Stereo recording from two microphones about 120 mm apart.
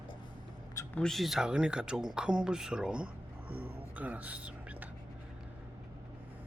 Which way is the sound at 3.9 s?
15° right (ahead or behind).